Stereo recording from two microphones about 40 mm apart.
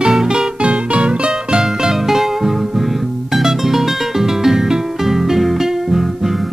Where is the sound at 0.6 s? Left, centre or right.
Right; by 6.3 s centre.